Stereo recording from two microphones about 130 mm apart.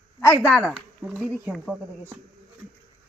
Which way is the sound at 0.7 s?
5° right (ahead or behind).